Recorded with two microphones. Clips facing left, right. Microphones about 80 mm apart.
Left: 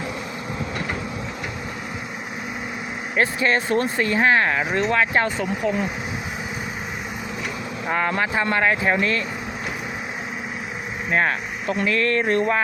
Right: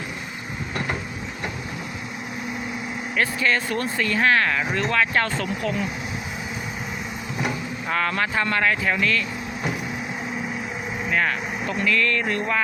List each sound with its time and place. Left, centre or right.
3.2 s speech: left
7.9 s speech: centre
11.1 s speech: left